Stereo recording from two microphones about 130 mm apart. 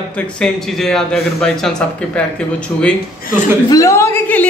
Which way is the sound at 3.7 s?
25° left (ahead or behind).